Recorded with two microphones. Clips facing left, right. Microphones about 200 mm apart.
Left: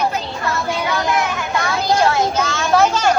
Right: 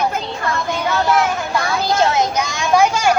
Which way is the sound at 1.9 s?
20° right (ahead or behind).